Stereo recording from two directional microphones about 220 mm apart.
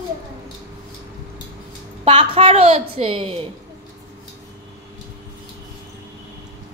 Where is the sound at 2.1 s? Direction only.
25° right (ahead or behind).